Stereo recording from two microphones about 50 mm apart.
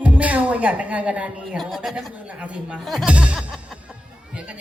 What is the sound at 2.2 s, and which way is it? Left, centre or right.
Speech, right.